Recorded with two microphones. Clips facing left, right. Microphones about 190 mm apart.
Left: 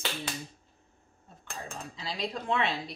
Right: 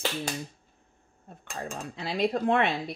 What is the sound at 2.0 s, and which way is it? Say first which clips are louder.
Speech: right 9 dB; 60° right (ahead or behind).